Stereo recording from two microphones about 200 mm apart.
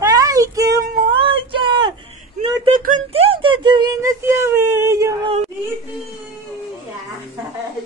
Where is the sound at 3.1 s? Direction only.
30° right (ahead or behind).